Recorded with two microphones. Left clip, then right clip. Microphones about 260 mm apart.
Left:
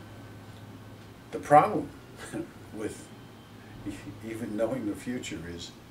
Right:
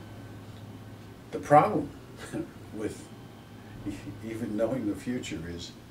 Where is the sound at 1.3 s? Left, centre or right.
Centre.